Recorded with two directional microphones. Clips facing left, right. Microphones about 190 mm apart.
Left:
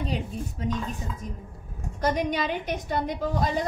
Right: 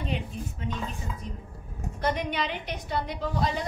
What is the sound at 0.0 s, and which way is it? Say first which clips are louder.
Speech: left 2 dB; 40° left (ahead or behind).